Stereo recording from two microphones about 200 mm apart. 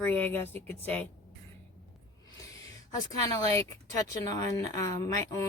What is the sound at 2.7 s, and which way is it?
Speech, 20° left (ahead or behind).